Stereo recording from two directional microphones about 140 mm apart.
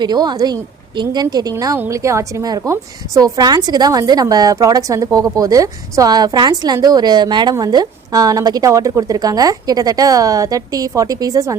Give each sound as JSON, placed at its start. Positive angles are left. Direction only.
{"t": 0.0, "sound": "a woman's voice", "side_deg": -30}